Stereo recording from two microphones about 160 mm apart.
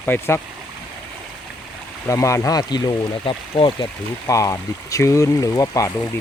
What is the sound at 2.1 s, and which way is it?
Speech, 20° left (ahead or behind).